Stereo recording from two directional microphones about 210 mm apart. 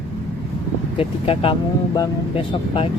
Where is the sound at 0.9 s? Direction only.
25° left (ahead or behind).